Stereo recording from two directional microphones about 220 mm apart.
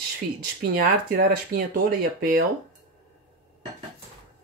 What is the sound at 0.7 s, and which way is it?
Speech, 40° right (ahead or behind).